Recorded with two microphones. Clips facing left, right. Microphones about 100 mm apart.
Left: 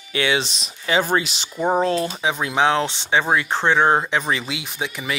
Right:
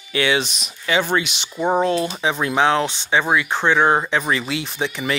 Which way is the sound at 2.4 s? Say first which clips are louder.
Right 1 dB; 20° left (ahead or behind).